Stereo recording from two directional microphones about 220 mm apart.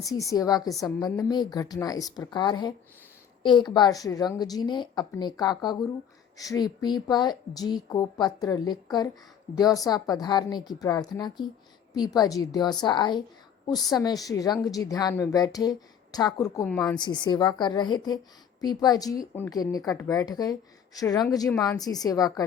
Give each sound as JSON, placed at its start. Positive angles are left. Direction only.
{"t": 0.0, "sound": "a woman's voice", "side_deg": 15}
{"t": 16.6, "sound": "a woman's voice", "side_deg": 5}
{"t": 17.0, "sound": "a woman's voice", "side_deg": 20}